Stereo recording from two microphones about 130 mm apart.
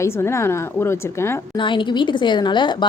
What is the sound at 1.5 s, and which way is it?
A woman's voice, 40° left (ahead or behind).